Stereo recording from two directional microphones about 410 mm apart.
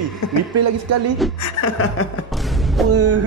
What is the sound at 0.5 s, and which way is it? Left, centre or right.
Speech, right.